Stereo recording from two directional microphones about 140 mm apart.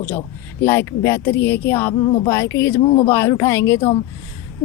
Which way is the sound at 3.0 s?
15° left (ahead or behind).